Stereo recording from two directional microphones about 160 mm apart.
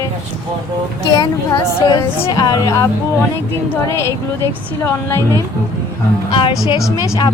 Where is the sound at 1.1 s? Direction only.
25° left (ahead or behind).